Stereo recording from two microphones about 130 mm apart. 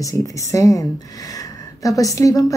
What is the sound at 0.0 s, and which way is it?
A woman's voice, 25° left (ahead or behind).